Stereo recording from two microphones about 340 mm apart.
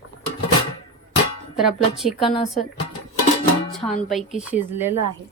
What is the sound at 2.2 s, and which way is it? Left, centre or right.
Speech, centre.